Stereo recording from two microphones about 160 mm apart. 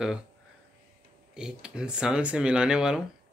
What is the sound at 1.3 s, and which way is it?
Speech, 5° right (ahead or behind).